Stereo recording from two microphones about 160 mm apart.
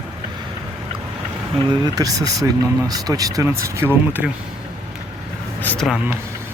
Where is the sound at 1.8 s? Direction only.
25° right (ahead or behind).